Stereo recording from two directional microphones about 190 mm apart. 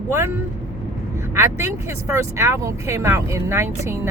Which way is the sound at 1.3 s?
15° right (ahead or behind).